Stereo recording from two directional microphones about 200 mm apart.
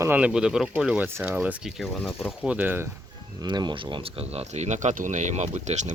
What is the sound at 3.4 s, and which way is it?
Speech, 20° right (ahead or behind).